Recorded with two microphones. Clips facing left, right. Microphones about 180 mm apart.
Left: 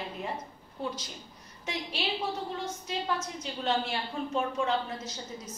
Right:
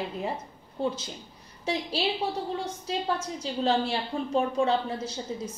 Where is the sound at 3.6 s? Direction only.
35° right (ahead or behind).